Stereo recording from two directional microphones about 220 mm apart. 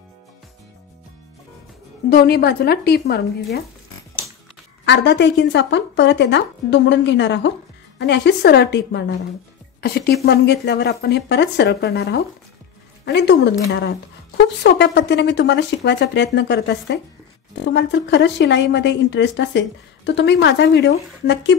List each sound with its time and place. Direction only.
2.0 s a woman's voice: 45° left (ahead or behind)
4.8 s a woman's voice: 50° left (ahead or behind)